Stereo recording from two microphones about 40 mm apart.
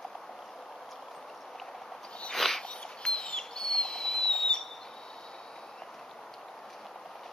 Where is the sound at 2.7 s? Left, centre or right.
Left.